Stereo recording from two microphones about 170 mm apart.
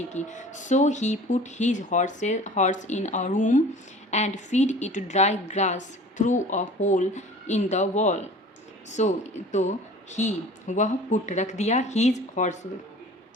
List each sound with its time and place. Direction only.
0.1 s a woman's voice: 45° left (ahead or behind)